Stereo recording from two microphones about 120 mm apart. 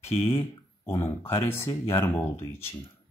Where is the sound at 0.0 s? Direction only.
20° left (ahead or behind).